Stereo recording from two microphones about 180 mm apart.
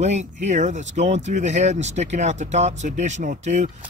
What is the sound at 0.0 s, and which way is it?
Speech, 40° right (ahead or behind).